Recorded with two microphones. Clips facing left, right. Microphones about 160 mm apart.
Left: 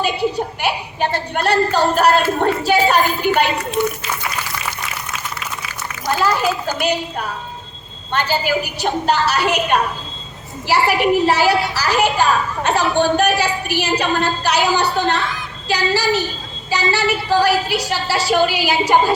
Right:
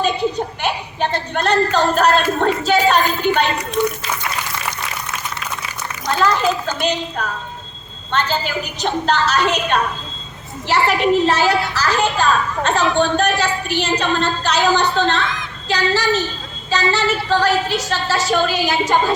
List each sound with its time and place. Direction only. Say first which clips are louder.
0.0 s a sound: even; 10° left (ahead or behind)
3.8 s speech: right 1 dB; 15° left (ahead or behind)
6.1 s a child's voice: right 1 dB; 10° left (ahead or behind)